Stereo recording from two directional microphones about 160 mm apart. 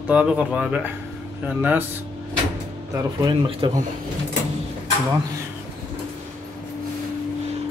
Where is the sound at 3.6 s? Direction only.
30° right (ahead or behind).